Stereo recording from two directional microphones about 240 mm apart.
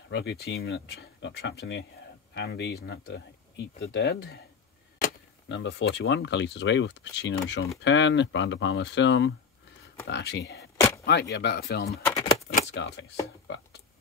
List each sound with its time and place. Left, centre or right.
0.1 s speech: left
5.5 s speech: left
12.0 s keys jangling: centre
12.7 s speech: left